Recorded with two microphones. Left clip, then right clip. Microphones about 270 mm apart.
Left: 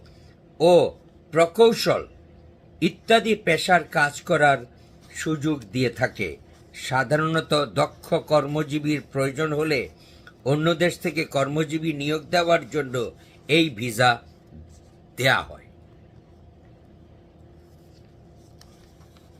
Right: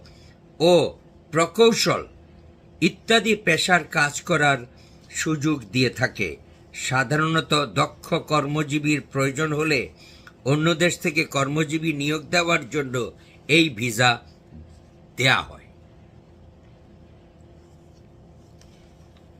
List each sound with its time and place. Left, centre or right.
0.6 s a man's voice: centre